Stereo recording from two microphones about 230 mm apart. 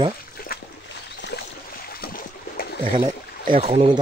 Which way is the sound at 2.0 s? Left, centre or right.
Left.